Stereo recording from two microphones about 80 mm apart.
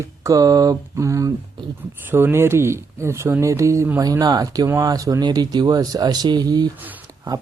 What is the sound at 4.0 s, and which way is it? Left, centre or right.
Speech, right.